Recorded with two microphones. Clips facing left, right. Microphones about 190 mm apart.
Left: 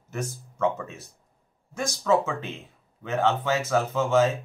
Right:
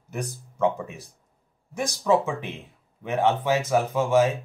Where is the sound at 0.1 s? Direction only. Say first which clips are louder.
Even; 15° right (ahead or behind).